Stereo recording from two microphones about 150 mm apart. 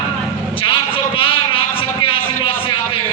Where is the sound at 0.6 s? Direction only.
35° left (ahead or behind).